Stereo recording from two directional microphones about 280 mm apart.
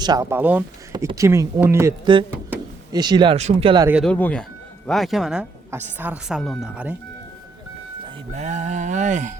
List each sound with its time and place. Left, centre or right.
0.0 s speech: centre
3.8 s a woman's voice: centre
8.0 s speech: right